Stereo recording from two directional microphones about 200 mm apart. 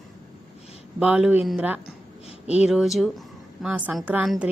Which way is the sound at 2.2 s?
30° left (ahead or behind).